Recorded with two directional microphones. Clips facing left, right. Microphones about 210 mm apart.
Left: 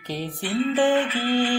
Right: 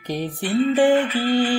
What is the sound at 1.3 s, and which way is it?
Music, 15° left (ahead or behind).